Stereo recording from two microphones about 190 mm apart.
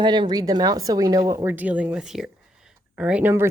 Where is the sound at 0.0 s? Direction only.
25° right (ahead or behind).